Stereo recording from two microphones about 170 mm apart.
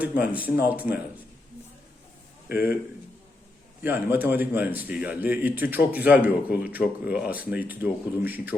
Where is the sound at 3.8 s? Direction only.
10° right (ahead or behind).